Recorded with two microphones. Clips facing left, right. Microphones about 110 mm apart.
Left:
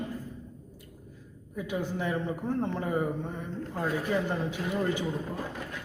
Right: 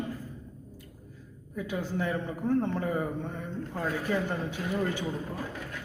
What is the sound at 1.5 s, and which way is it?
Speech, 15° left (ahead or behind).